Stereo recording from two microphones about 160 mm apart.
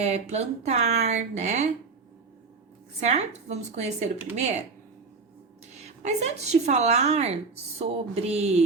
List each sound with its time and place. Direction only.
0.0 s a woman's voice: 40° right (ahead or behind)
3.0 s a woman's voice: 45° right (ahead or behind)
5.7 s a woman's voice: 45° right (ahead or behind)